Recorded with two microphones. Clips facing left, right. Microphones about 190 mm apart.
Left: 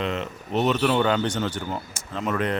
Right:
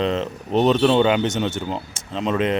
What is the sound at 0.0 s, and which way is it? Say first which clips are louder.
Speech: right 6 dB; 30° right (ahead or behind).